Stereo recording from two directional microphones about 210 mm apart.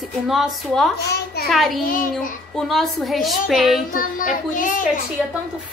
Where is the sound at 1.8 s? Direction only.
40° left (ahead or behind).